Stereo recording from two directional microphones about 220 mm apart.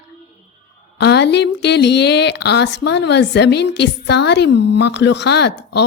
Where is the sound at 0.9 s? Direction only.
50° left (ahead or behind).